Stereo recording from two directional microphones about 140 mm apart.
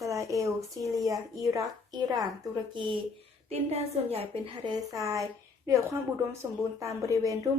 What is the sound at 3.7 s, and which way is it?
Speech, 45° right (ahead or behind).